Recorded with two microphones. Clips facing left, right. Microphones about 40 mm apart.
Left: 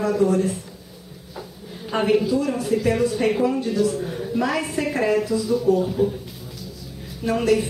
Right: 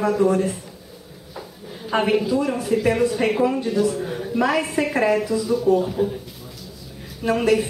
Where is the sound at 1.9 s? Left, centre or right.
Centre.